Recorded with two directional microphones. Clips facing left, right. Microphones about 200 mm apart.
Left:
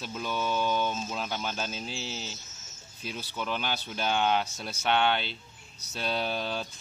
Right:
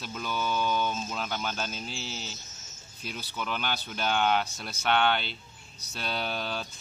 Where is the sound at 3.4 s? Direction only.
30° left (ahead or behind).